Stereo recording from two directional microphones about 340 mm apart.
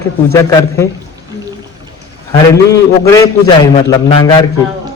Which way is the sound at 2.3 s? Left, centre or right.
Centre.